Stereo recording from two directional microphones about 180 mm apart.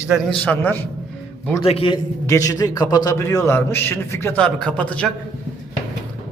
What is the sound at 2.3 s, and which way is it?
A man's voice, 20° left (ahead or behind).